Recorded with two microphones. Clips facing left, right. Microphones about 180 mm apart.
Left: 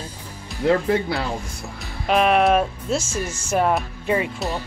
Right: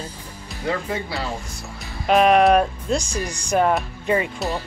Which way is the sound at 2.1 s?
Centre (ahead or behind).